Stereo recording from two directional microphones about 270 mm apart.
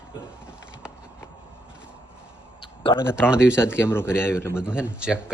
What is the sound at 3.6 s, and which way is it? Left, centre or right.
Speech, centre.